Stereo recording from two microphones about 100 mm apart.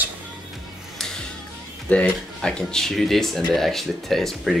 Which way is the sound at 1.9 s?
10° left (ahead or behind).